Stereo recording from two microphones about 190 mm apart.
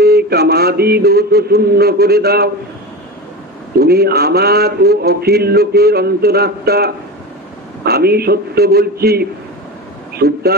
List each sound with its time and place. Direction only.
0.0 s speech: 55° right (ahead or behind)
3.7 s a man's voice: 55° right (ahead or behind)